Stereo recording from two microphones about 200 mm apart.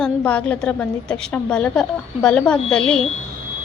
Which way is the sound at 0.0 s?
5° left (ahead or behind).